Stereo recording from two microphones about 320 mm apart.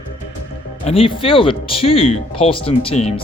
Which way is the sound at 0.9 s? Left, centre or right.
Centre.